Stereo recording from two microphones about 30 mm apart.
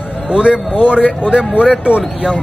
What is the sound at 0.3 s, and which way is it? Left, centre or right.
A man's voice, right.